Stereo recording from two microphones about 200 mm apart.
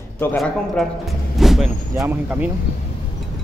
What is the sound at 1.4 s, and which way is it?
Vehicle, centre (ahead or behind).